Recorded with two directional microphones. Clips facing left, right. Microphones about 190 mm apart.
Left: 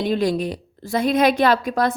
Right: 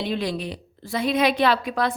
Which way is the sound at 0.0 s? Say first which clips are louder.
Left 6 dB; 45° left (ahead or behind).